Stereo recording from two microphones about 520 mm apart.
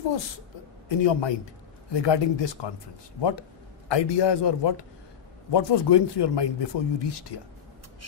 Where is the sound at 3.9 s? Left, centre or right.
Left.